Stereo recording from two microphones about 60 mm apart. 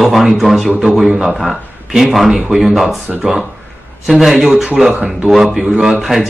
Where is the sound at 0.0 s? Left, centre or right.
Centre.